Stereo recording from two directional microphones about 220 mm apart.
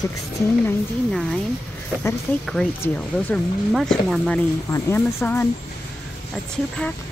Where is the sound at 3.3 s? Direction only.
Centre (ahead or behind).